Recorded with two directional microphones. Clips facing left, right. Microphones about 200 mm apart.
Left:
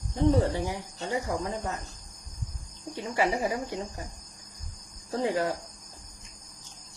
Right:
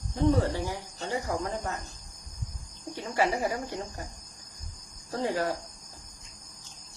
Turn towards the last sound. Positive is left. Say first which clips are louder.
# left 2 dB
turn(degrees=20)  # may be behind; listen again after turning